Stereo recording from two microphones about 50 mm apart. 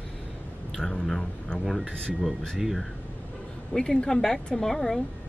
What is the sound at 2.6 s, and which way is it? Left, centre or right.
Speech, centre.